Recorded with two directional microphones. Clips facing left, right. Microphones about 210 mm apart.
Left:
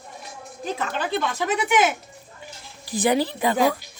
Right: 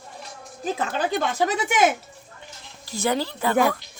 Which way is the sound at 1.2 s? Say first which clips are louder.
Left 1 dB; 40° right (ahead or behind).